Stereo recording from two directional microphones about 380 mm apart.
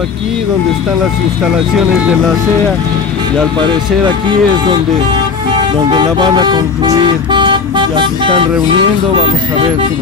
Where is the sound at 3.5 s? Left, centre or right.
Centre.